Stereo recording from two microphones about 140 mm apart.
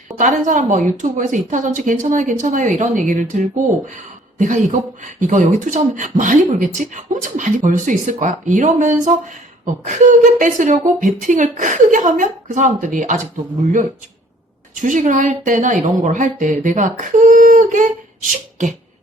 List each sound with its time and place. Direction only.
0.2 s a woman's voice: 65° right (ahead or behind)
14.8 s speech: 65° right (ahead or behind)